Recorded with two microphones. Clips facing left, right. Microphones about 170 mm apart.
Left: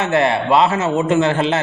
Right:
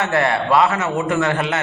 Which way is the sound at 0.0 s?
20° left (ahead or behind).